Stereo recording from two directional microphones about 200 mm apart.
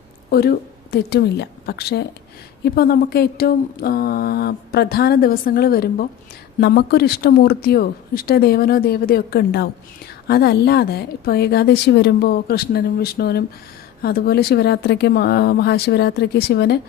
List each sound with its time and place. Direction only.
0.3 s a woman's voice: 50° left (ahead or behind)